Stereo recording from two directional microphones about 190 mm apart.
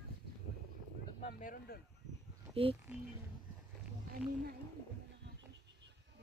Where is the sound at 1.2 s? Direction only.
45° left (ahead or behind).